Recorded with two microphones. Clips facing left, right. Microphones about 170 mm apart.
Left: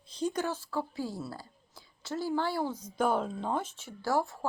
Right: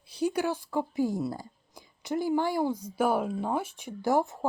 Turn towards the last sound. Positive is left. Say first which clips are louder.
# right 4 dB
turn(degrees=-20)  # may be behind; listen again after turning